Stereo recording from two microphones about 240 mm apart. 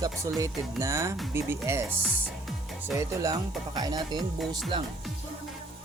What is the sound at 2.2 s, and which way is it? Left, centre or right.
Music, centre.